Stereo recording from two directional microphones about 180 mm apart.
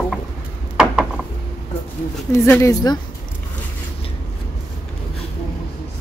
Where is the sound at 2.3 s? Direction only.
15° left (ahead or behind).